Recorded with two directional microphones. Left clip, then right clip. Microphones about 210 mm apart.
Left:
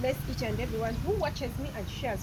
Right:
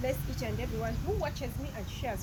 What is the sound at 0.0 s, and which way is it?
Speech, centre (ahead or behind).